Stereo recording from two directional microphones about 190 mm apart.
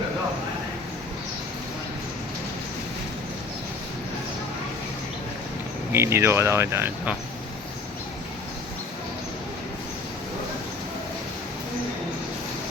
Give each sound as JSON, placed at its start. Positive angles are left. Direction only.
{"t": 5.9, "sound": "speech", "side_deg": -15}